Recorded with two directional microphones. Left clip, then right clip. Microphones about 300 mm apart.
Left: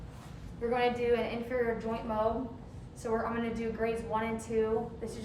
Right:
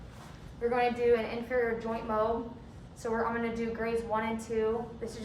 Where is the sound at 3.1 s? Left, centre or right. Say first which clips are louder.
Right 2 dB; centre.